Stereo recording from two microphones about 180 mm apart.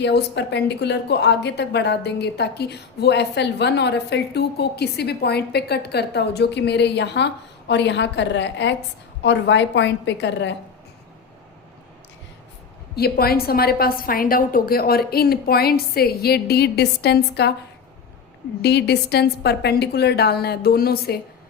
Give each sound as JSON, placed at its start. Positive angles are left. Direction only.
{"t": 0.0, "sound": "a woman's voice", "side_deg": 70}
{"t": 13.0, "sound": "a woman's voice", "side_deg": 60}
{"t": 18.6, "sound": "a woman's voice", "side_deg": 65}